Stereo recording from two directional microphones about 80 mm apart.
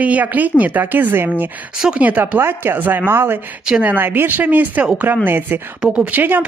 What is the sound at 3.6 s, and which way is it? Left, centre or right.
A man's voice, centre.